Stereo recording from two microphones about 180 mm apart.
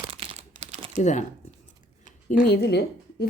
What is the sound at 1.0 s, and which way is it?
Speech, 40° left (ahead or behind).